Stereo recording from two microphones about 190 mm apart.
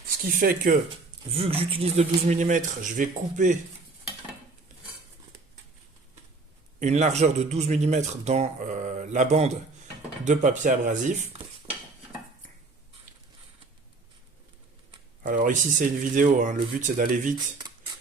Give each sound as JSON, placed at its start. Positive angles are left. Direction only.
{"t": 0.3, "sound": "speech", "side_deg": -45}
{"t": 1.3, "sound": "speech", "side_deg": -30}
{"t": 6.7, "sound": "speech", "side_deg": -40}
{"t": 15.2, "sound": "speech", "side_deg": -45}